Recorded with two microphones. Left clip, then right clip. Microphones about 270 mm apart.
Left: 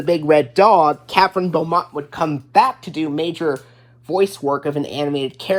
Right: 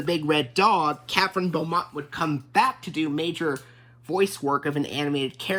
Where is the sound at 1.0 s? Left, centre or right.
Centre.